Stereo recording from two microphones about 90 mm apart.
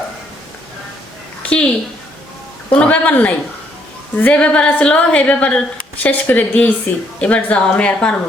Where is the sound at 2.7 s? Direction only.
15° left (ahead or behind).